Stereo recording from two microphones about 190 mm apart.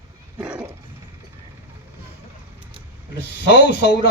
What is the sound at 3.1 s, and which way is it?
Speech, 65° left (ahead or behind).